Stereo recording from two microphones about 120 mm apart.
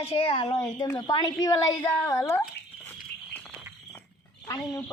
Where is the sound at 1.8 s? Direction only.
15° left (ahead or behind).